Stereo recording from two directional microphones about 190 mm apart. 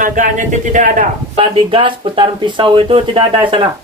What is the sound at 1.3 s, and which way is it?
Speech, 25° right (ahead or behind).